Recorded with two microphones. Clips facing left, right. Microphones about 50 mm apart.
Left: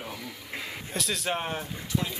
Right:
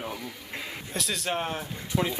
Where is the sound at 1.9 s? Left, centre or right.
Right.